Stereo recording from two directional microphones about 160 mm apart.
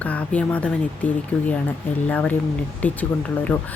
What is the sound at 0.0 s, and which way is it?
Speech, 10° left (ahead or behind).